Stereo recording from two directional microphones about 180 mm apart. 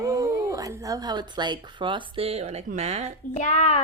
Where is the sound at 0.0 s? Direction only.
20° right (ahead or behind); by 3.1 s 35° right (ahead or behind).